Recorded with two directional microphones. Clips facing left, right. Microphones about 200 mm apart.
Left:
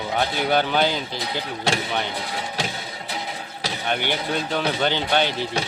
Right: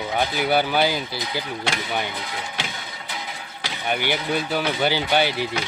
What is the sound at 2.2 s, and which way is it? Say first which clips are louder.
Music: left 3 dB; 35° left (ahead or behind).